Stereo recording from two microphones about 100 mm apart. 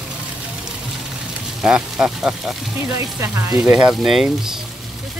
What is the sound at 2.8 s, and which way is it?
Speech, 30° right (ahead or behind).